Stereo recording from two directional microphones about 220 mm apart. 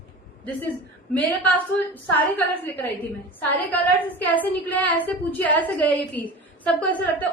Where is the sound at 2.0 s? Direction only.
10° left (ahead or behind).